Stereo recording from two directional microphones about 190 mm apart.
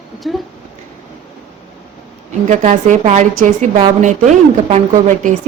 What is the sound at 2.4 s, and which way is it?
A woman's voice, 40° right (ahead or behind).